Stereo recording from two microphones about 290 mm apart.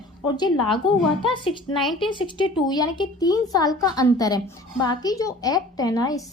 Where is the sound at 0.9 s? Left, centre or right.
Centre.